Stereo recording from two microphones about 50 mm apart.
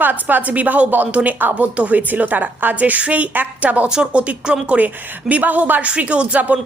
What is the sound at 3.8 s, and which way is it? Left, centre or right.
A woman's voice, centre.